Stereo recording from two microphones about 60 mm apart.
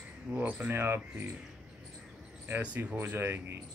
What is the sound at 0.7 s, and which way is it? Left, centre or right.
Speech, right.